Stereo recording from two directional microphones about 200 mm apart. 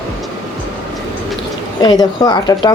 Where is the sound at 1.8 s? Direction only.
20° left (ahead or behind).